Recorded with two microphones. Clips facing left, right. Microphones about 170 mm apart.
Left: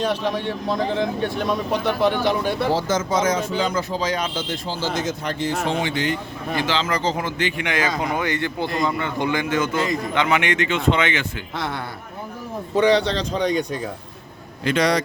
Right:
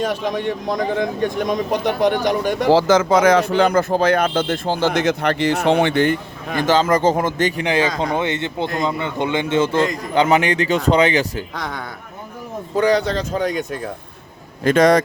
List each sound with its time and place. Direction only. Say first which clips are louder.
0.1 s speech: right 2 dB; 15° right (ahead or behind)
2.6 s speech: right 7 dB; 85° right; by 6.1 s 55° right (ahead or behind)
6.6 s a man's voice: right 8 dB; 45° right (ahead or behind)
13.3 s speech: left 2 dB; 5° right (ahead or behind)
14.6 s speech: right 6 dB; 50° right (ahead or behind)